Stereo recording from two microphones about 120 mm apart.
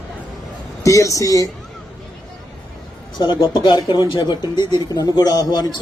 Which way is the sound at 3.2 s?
40° left (ahead or behind).